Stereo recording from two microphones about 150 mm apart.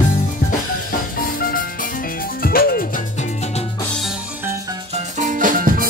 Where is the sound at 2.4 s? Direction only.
90° left.